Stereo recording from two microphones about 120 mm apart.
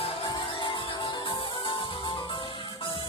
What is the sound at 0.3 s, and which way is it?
Music, 40° left (ahead or behind).